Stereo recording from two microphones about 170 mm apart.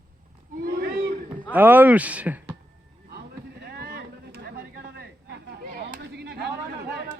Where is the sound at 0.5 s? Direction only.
55° right (ahead or behind).